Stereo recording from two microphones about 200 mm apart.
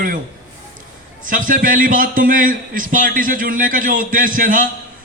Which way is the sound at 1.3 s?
40° right (ahead or behind).